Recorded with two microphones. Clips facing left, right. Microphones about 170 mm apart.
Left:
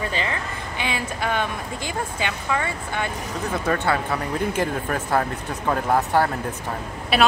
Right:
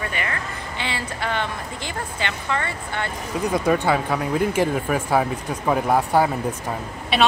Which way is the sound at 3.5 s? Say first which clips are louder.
Right 3 dB; 15° right (ahead or behind).